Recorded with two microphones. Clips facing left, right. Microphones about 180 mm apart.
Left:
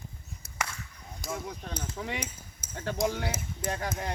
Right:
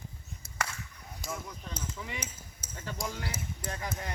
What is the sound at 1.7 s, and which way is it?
Speech, 60° left (ahead or behind).